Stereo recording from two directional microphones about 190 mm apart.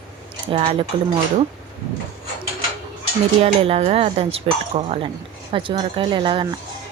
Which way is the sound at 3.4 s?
30° right (ahead or behind).